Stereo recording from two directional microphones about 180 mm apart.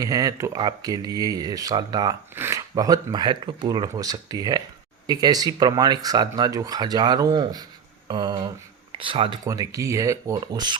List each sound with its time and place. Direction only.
0.0 s speech: 20° right (ahead or behind)